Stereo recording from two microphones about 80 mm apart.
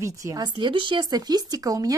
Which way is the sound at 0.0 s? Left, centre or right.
Right.